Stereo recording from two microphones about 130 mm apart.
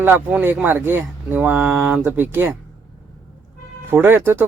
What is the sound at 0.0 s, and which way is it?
Speech, 15° right (ahead or behind).